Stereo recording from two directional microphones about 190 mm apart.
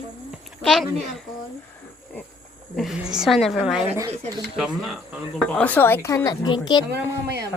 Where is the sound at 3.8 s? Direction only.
10° right (ahead or behind).